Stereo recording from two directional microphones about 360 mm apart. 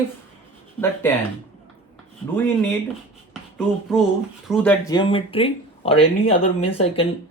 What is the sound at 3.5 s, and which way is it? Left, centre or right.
Speech, centre.